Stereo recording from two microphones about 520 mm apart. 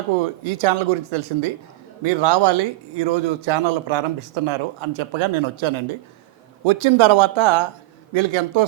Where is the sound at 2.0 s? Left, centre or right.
Right.